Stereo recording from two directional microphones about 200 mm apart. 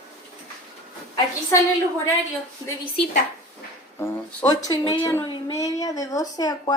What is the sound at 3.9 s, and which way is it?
Speech, 10° left (ahead or behind).